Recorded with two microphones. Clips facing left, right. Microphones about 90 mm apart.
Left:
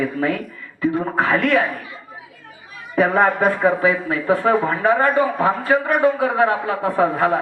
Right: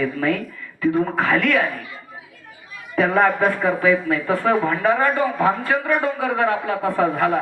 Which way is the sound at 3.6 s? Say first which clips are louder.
Left 1 dB; 25° left (ahead or behind).